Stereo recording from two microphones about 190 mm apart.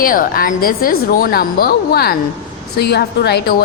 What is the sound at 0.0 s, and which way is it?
A woman's voice, 50° left (ahead or behind).